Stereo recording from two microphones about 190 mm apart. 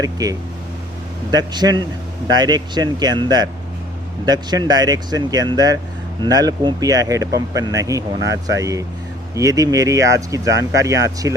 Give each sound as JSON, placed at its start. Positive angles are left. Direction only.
{"t": 0.0, "sound": "speech", "side_deg": -20}